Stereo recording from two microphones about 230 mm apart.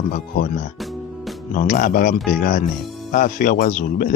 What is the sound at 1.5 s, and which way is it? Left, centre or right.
Speech, left.